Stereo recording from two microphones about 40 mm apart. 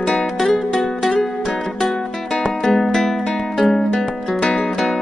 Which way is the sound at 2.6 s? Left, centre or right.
Centre.